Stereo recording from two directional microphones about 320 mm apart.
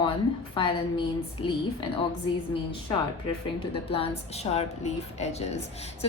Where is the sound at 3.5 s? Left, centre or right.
Centre.